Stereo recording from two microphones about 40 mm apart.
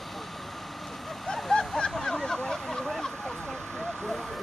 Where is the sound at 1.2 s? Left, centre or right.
Centre.